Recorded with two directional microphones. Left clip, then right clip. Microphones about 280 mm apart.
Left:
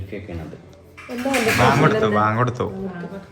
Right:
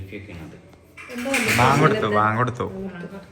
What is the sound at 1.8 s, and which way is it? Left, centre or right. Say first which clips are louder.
Speech: left 1 dB; centre.